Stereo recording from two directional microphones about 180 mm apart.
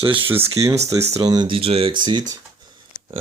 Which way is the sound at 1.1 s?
20° right (ahead or behind).